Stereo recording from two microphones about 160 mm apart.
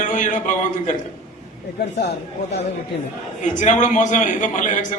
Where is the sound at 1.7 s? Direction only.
90° left.